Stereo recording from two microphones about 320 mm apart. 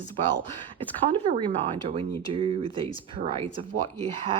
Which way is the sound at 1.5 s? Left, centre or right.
Centre.